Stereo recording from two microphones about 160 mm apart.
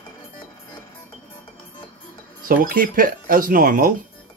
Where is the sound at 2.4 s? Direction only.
60° right (ahead or behind).